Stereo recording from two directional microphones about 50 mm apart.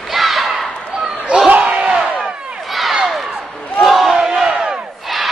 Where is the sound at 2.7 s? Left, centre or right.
Centre.